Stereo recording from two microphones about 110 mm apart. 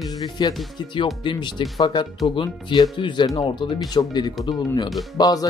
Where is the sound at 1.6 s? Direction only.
50° left (ahead or behind).